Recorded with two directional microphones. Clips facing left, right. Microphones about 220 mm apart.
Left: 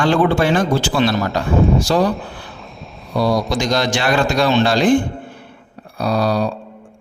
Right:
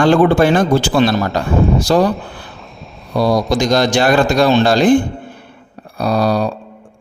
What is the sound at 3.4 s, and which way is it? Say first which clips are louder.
Speech: right 4 dB; 45° right (ahead or behind).